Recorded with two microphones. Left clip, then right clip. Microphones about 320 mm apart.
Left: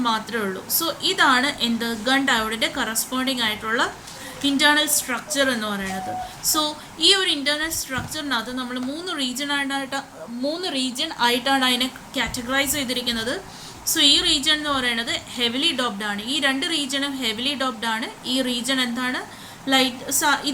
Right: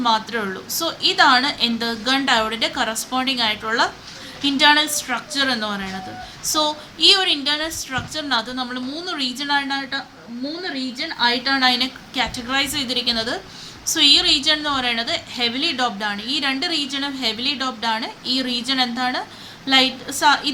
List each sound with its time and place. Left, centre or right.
0.0 s a woman's voice: centre